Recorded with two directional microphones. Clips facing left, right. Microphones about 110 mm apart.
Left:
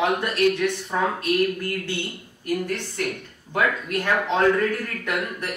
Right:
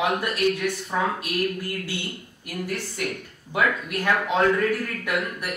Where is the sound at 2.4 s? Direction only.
10° right (ahead or behind).